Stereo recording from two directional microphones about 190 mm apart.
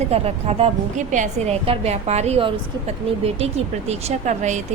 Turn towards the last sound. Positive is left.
turn(degrees=-35)  # may be behind; listen again after turning